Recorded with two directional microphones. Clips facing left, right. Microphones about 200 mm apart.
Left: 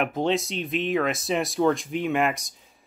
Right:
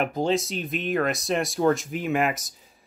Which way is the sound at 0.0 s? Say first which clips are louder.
Even; centre (ahead or behind).